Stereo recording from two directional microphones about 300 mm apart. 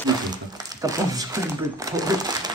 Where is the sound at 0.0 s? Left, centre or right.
Centre.